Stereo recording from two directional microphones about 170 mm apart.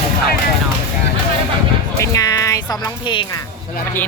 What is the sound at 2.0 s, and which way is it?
Speech, 20° left (ahead or behind).